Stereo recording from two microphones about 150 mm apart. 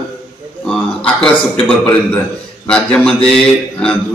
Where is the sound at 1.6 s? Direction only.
10° left (ahead or behind).